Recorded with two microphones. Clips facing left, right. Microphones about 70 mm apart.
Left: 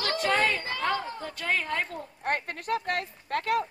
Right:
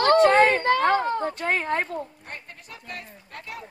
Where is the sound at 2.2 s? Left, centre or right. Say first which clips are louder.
Left 11 dB; left.